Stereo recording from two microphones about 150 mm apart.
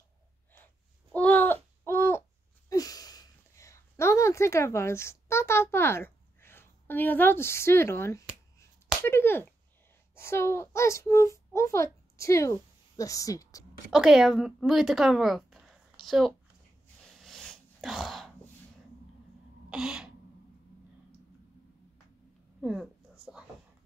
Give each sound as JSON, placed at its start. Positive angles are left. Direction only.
{"t": 1.1, "sound": "a sound", "side_deg": 10}
{"t": 9.0, "sound": "slap", "side_deg": 15}
{"t": 10.1, "sound": "a child's voice", "side_deg": 15}
{"t": 13.9, "sound": "a woman's voice", "side_deg": -5}
{"t": 17.0, "sound": "sneeze", "side_deg": 5}
{"t": 19.7, "sound": "throat clearing", "side_deg": -5}
{"t": 22.6, "sound": "a sound", "side_deg": 0}